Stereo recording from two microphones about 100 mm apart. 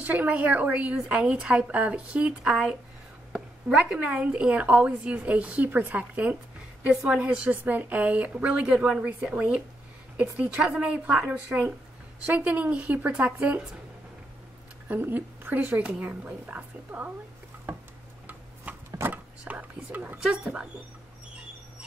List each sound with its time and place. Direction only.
0.0 s speech: 15° right (ahead or behind)
14.9 s speech: 20° right (ahead or behind)
18.2 s tick-tock: 20° right (ahead or behind)
18.9 s a sound: 15° right (ahead or behind)
20.2 s speech: 5° right (ahead or behind)